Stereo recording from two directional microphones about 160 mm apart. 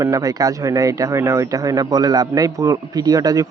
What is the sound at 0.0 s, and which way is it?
Speech, 20° right (ahead or behind).